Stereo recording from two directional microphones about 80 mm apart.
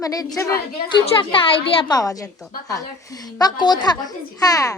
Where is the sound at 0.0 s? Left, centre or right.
Left.